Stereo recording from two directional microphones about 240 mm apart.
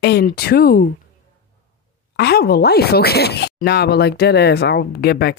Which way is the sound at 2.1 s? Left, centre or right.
Left.